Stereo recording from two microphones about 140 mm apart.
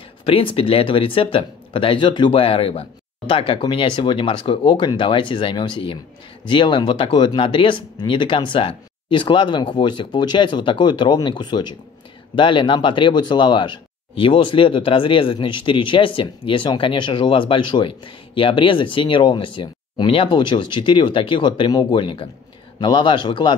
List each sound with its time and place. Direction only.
0.2 s speech: 40° left (ahead or behind)